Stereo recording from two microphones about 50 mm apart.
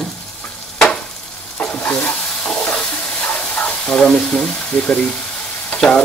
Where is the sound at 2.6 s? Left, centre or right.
Left.